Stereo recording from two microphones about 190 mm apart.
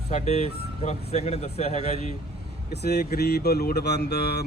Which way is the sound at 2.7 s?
60° left (ahead or behind).